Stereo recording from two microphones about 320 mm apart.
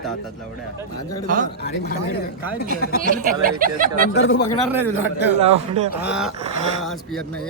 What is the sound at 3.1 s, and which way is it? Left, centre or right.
Speech, right.